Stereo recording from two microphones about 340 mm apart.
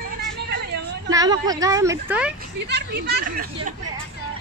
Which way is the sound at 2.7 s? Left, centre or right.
Right.